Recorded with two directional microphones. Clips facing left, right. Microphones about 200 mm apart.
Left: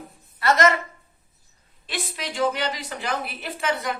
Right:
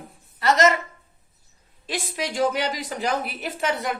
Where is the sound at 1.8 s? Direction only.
45° right (ahead or behind).